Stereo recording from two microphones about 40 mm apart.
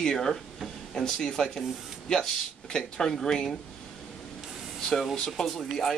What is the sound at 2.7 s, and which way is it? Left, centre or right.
Speech, centre.